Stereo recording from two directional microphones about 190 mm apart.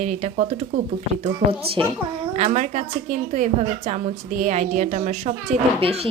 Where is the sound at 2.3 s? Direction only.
40° right (ahead or behind).